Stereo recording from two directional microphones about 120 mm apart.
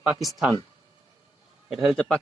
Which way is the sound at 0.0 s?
5° right (ahead or behind).